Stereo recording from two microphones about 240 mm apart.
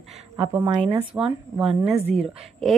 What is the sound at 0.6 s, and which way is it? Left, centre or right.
Speech, right.